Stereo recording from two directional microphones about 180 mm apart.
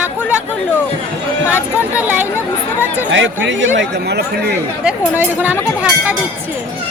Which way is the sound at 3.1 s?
90° right.